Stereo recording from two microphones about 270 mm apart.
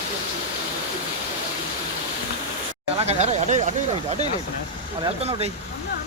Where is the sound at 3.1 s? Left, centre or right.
Right.